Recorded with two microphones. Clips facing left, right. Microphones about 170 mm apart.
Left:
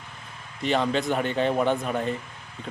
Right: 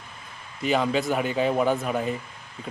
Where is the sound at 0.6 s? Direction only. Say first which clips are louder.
Right 1 dB; 5° right (ahead or behind).